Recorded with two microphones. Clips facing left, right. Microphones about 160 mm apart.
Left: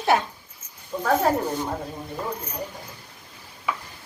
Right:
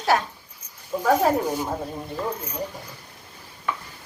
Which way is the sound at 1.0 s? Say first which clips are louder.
Right 2 dB; 10° right (ahead or behind).